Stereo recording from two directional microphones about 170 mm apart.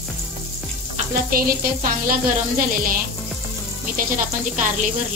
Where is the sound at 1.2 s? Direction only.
60° right (ahead or behind).